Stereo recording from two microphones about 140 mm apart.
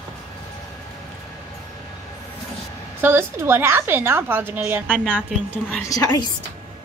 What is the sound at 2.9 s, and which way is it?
A woman's voice, 15° right (ahead or behind).